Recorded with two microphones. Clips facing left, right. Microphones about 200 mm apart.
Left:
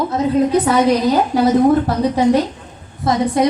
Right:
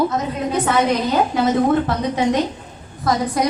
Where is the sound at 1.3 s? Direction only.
35° left (ahead or behind).